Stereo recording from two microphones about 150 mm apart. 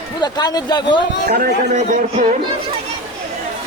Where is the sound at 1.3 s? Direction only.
90° right.